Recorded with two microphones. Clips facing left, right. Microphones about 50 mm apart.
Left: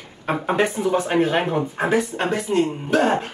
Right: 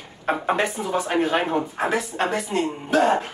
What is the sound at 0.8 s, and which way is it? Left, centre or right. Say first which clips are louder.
Speech: left 6 dB; right.